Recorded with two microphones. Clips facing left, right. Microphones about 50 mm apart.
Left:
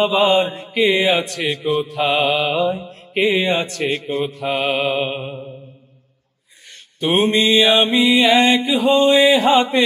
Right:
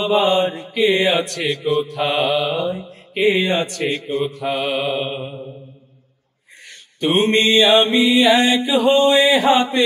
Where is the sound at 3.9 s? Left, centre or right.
Left.